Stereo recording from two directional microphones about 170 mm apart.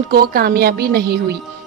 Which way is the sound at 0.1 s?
65° right (ahead or behind).